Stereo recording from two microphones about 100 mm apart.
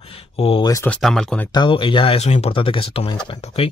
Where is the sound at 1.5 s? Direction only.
55° left (ahead or behind); by 3.7 s 75° left (ahead or behind).